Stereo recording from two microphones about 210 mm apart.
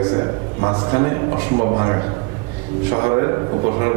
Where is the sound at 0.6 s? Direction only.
30° right (ahead or behind).